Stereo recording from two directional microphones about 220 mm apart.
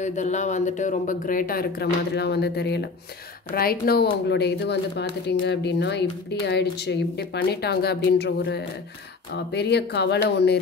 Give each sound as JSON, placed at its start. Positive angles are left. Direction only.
{"t": 0.0, "sound": "speech", "side_deg": 35}